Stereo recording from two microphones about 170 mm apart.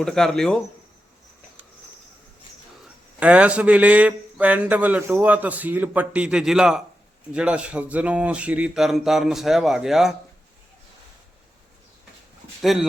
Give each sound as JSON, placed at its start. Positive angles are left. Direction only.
{"t": 0.0, "sound": "speech", "side_deg": 0}
{"t": 3.2, "sound": "a man's voice", "side_deg": -10}
{"t": 12.6, "sound": "speech", "side_deg": 0}